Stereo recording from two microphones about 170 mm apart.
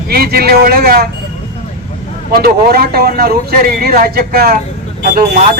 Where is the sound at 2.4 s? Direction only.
60° right (ahead or behind).